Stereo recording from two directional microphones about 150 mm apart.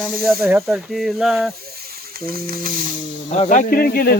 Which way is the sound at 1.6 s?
90° right.